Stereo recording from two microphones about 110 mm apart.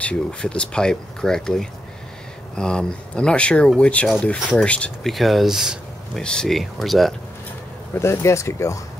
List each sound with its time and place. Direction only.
0.0 s speech: 10° left (ahead or behind)
5.1 s speech: centre (ahead or behind)
8.0 s speech: 25° left (ahead or behind)